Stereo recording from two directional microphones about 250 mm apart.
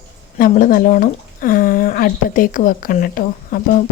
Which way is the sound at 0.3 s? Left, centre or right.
Left.